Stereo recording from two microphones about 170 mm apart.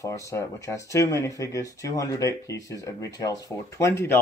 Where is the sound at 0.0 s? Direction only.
15° left (ahead or behind).